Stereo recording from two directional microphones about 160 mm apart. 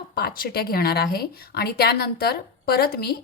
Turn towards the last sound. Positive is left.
turn(degrees=75)  # may be behind; listen again after turning